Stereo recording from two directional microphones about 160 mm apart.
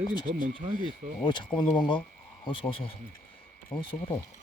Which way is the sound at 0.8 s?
30° left (ahead or behind).